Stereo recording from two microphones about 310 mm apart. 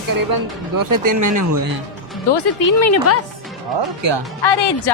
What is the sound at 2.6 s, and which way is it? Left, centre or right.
Speech, left.